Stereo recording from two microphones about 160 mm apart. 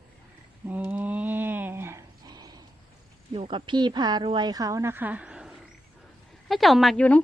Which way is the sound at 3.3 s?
30° right (ahead or behind).